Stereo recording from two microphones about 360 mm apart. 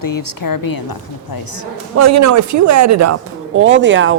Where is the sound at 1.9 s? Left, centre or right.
Right.